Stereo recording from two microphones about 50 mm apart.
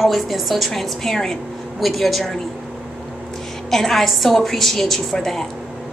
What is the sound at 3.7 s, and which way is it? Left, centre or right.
Speech, centre.